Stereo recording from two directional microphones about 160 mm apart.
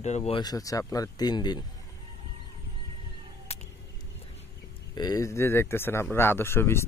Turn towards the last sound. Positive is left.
turn(degrees=15)  # may be behind; listen again after turning